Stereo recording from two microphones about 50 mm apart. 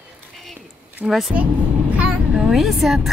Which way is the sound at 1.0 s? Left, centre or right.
Centre.